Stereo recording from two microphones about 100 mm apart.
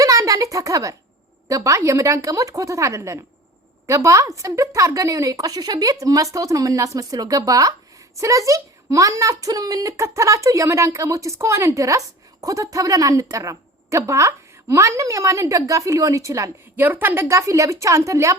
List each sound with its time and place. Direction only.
0.0 s a sound: 35° right (ahead or behind)
1.5 s speech: 35° right (ahead or behind)
16.7 s speech: 20° right (ahead or behind)